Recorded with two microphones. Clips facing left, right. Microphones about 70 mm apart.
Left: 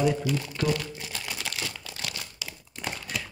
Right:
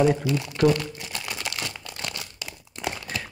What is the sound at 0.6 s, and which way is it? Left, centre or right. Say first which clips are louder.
Speech: right 9 dB; right.